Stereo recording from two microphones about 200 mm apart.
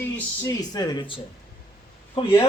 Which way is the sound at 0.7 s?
20° left (ahead or behind).